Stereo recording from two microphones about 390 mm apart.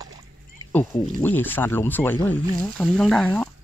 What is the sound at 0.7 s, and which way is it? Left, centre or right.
Speech, centre.